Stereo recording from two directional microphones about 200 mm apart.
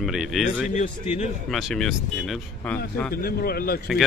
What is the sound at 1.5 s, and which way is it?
Speech, centre (ahead or behind).